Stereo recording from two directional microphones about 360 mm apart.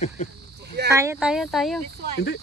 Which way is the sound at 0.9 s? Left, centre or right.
Centre.